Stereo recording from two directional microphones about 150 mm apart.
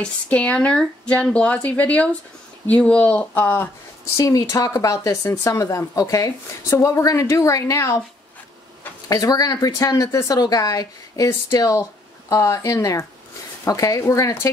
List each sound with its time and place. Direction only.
0.0 s speech: 10° left (ahead or behind)
9.1 s speech: 25° left (ahead or behind)